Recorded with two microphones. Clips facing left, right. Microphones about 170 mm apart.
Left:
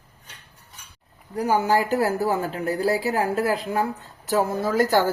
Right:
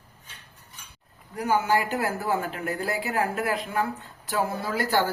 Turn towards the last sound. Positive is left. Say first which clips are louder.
# left 5 dB
turn(degrees=45)  # may be behind; listen again after turning